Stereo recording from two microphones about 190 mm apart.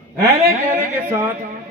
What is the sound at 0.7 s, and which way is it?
Speech, 10° right (ahead or behind).